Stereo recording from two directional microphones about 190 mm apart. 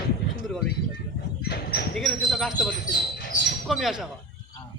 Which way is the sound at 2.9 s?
65° left (ahead or behind).